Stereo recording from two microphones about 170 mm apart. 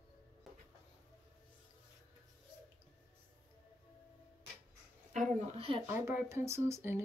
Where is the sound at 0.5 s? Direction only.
Centre (ahead or behind).